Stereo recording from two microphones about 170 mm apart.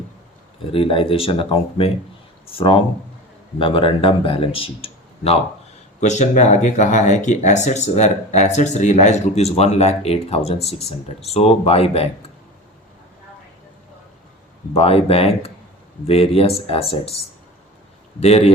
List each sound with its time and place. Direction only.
0.7 s speech: 30° left (ahead or behind)
14.7 s speech: 35° left (ahead or behind)
18.2 s speech: 40° left (ahead or behind)